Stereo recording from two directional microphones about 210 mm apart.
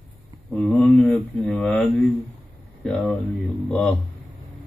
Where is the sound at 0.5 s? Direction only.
5° left (ahead or behind).